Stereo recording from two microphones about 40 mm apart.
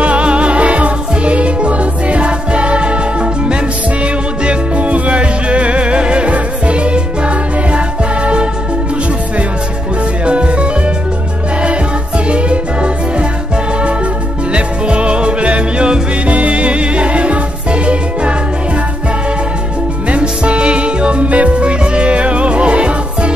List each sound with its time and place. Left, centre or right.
0.0 s music: right
10.2 s music: right
12.3 s music: right
14.5 s music: right
20.1 s music: right